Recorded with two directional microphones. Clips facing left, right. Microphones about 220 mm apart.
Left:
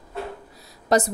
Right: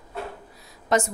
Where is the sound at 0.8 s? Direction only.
35° left (ahead or behind).